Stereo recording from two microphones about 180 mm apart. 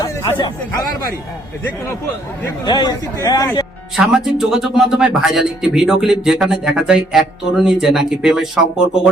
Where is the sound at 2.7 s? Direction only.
20° left (ahead or behind).